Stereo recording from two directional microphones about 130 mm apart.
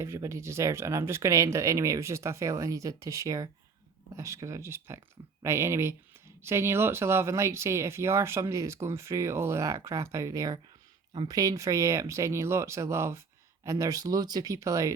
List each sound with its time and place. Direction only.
0.0 s speech: 20° right (ahead or behind)